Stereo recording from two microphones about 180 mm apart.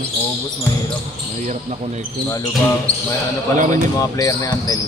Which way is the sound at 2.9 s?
5° left (ahead or behind).